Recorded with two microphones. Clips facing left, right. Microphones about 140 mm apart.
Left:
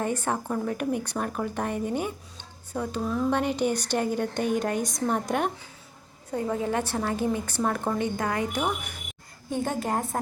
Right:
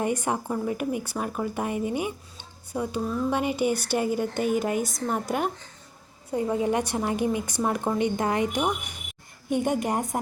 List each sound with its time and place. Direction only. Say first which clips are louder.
0.0 s a woman's voice: right 1 dB; 15° right (ahead or behind)
6.3 s a woman's voice: right 2 dB; 15° right (ahead or behind)